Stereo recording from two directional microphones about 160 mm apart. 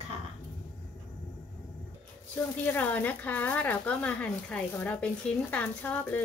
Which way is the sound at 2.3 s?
15° left (ahead or behind).